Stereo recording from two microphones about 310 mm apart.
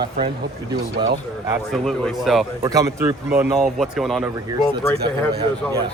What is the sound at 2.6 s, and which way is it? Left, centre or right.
Speech, centre.